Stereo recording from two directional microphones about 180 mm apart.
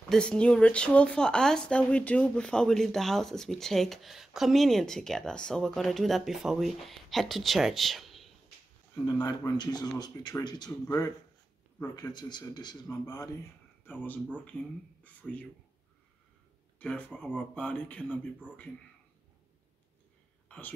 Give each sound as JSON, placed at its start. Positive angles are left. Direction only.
{"t": 0.1, "sound": "speech", "side_deg": 5}
{"t": 8.9, "sound": "speech", "side_deg": 20}
{"t": 15.2, "sound": "speech", "side_deg": 0}
{"t": 16.8, "sound": "speech", "side_deg": 10}
{"t": 20.4, "sound": "whispering", "side_deg": 10}